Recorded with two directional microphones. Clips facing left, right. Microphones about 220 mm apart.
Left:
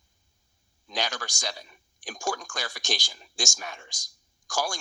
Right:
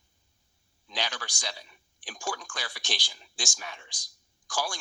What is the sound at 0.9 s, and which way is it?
Speech, 45° left (ahead or behind).